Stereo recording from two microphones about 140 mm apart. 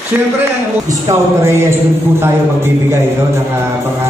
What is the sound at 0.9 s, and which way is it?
A man's voice, 20° right (ahead or behind).